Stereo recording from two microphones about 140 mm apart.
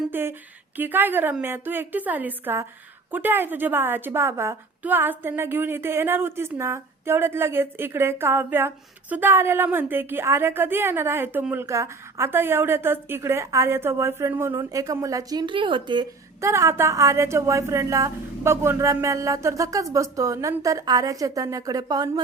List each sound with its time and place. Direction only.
0.1 s a woman's voice: 15° right (ahead or behind); by 16.0 s 35° right (ahead or behind)
16.4 s a woman's voice: 20° right (ahead or behind)